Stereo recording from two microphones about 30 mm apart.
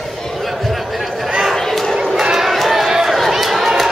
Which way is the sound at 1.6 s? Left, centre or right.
Centre.